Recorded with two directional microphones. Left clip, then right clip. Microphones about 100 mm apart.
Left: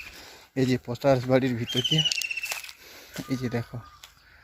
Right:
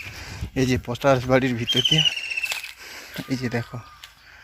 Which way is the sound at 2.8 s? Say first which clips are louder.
Right 9 dB; 5° left (ahead or behind).